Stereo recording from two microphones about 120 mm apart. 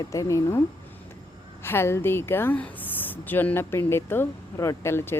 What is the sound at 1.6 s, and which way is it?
A woman's voice, 20° left (ahead or behind).